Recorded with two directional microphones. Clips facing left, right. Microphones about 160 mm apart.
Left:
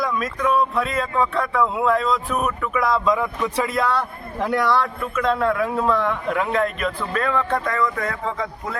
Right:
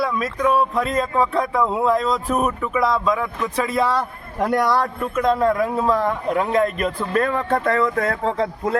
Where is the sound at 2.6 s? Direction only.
25° right (ahead or behind).